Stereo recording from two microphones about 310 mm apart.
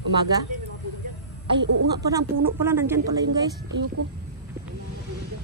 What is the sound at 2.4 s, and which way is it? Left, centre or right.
Speech, centre.